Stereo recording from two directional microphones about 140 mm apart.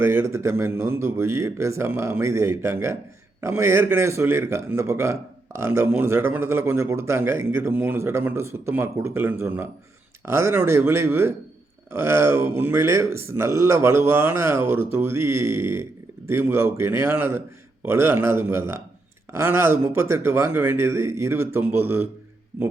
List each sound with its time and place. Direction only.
0.0 s speech: 20° right (ahead or behind)